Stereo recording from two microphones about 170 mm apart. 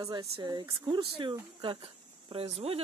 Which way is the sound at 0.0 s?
20° right (ahead or behind).